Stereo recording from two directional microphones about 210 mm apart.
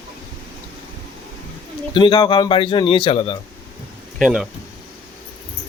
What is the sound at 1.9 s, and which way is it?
A man's voice, 20° left (ahead or behind).